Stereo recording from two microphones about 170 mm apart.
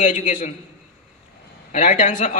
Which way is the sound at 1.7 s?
45° left (ahead or behind).